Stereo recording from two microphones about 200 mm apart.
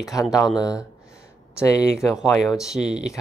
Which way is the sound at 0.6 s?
15° left (ahead or behind).